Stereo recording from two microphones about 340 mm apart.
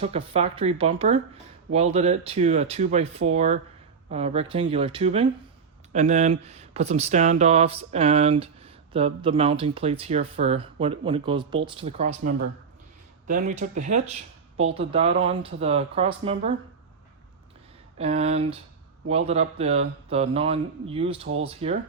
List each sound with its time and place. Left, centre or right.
0.0 s speech: centre
17.9 s speech: centre